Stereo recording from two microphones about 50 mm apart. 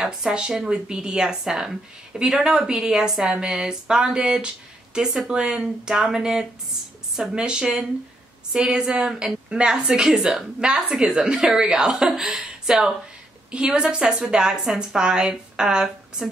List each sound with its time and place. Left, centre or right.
0.0 s a woman's voice: centre